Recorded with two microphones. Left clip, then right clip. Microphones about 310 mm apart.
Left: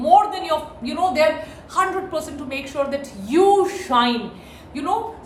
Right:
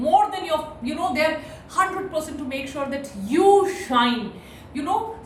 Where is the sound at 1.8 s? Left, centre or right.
Centre.